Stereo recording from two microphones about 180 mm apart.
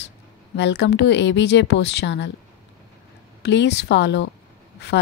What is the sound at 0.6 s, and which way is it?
Speech, 75° left (ahead or behind).